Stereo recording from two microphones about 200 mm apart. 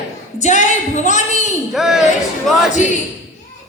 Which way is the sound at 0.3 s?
35° left (ahead or behind).